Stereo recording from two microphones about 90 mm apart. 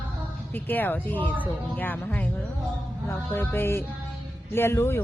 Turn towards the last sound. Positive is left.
turn(degrees=25)  # may be behind; listen again after turning